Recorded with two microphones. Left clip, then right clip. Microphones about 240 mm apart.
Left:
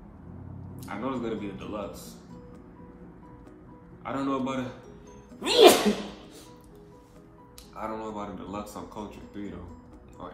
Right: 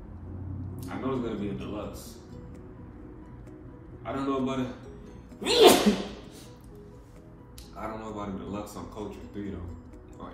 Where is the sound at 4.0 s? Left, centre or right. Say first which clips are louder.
Even; left.